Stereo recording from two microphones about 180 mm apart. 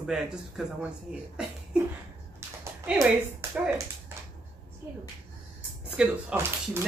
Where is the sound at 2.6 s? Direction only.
15° right (ahead or behind).